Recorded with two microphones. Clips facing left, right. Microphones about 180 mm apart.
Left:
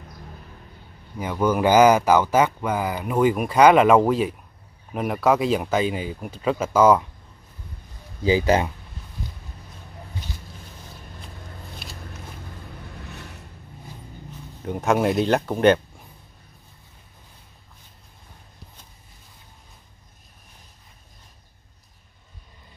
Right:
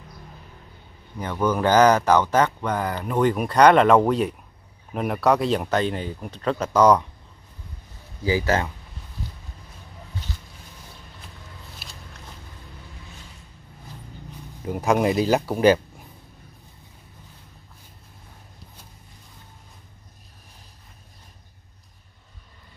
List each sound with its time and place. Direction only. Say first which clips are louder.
1.1 s speech: left 1 dB; 10° left (ahead or behind)
8.2 s speech: left 3 dB; 20° left (ahead or behind)
11.8 s a sound: left 4 dB; centre (ahead or behind)
13.0 s vehicle: left 6 dB; 65° left (ahead or behind)
14.6 s speech: even; 5° right (ahead or behind)